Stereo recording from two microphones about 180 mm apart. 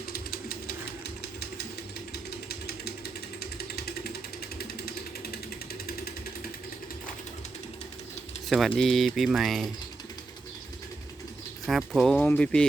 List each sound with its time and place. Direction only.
0.1 s a sound: 55° left (ahead or behind)
2.1 s jackhammer: 60° left (ahead or behind)
3.4 s a sound: 60° left (ahead or behind)
4.8 s jackhammer: 60° left (ahead or behind)
8.4 s speech: centre (ahead or behind)
11.6 s speech: centre (ahead or behind)